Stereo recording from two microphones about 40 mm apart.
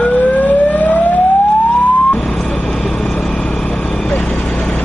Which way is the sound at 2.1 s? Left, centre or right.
Centre.